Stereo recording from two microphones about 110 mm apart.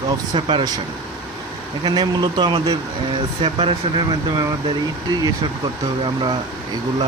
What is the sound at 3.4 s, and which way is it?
Speech, 65° right (ahead or behind).